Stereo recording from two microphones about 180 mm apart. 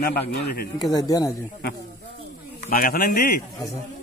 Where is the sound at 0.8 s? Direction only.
20° left (ahead or behind).